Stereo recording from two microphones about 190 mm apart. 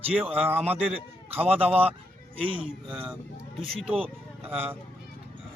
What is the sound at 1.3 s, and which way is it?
Speech, 30° right (ahead or behind).